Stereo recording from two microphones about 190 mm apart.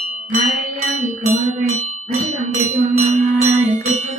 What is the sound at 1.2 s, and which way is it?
Music, 35° right (ahead or behind).